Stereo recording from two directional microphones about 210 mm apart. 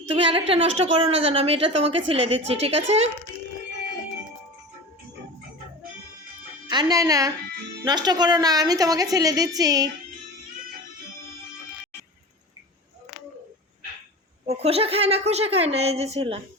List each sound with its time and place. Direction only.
0.3 s a woman's voice: 25° right (ahead or behind)
6.7 s a woman's voice: 20° right (ahead or behind)
14.4 s a woman's voice: 30° right (ahead or behind)